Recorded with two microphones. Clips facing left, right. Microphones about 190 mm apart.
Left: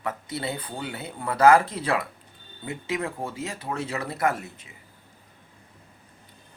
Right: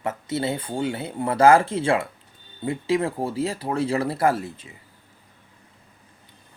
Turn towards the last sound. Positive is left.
turn(degrees=-30)  # may be behind; listen again after turning